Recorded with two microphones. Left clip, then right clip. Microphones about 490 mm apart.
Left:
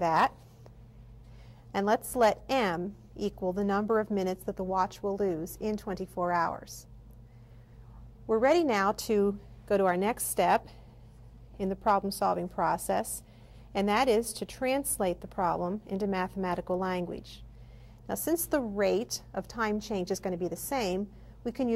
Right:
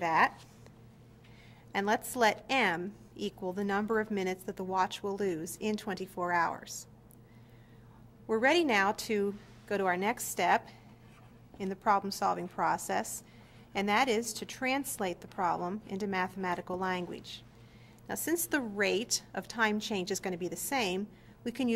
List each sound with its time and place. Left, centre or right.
0.0 s a woman's voice: left
1.7 s a woman's voice: left
8.3 s a woman's voice: left